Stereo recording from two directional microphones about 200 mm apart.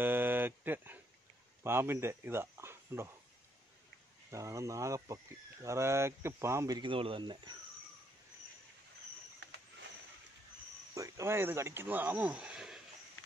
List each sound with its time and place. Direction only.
0.0 s a sound: 10° right (ahead or behind)
1.6 s speech: 10° right (ahead or behind)
4.3 s speech: 15° right (ahead or behind)
11.0 s speech: 15° right (ahead or behind)